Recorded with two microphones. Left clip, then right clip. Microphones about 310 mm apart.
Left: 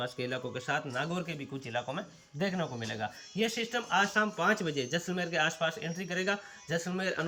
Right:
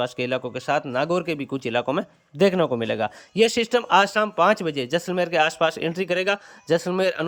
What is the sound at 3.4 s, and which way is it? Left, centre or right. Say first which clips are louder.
Speech: right 13 dB; centre.